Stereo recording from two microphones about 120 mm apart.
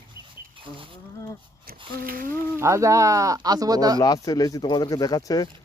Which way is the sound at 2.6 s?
25° right (ahead or behind).